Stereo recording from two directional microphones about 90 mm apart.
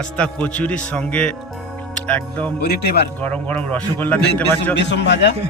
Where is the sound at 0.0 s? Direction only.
10° left (ahead or behind).